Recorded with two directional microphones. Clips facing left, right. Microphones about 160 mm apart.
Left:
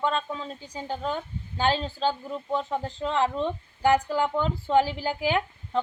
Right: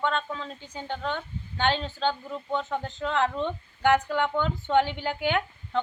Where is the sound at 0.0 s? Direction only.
35° left (ahead or behind).